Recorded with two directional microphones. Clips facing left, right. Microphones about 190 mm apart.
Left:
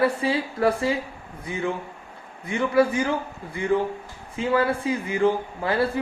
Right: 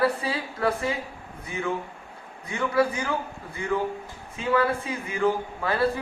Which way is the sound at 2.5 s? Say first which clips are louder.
Left 4 dB; 25° left (ahead or behind).